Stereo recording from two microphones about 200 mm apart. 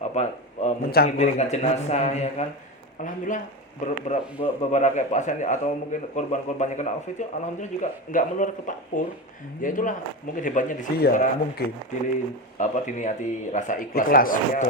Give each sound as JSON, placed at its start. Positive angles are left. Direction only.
{"t": 0.1, "sound": "a sound", "side_deg": 35}
{"t": 0.9, "sound": "a man's voice", "side_deg": 50}
{"t": 1.2, "sound": "speech", "side_deg": 35}